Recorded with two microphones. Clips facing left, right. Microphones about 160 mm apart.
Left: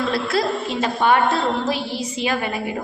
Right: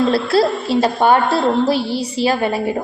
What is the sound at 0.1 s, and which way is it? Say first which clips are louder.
A woman's voice: right 6 dB; 30° right (ahead or behind).